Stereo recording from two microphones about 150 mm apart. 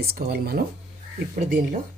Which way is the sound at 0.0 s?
90° right.